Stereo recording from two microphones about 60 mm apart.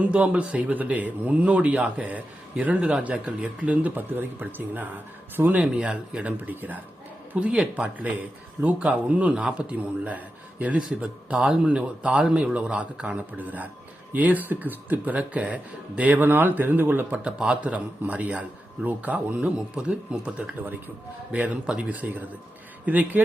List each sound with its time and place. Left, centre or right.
0.0 s speech: right
6.3 s speech: right
7.3 s speech: centre
11.3 s speech: centre; by 17.1 s right
17.3 s speech: centre